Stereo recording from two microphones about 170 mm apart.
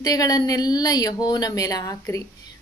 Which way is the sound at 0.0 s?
20° left (ahead or behind).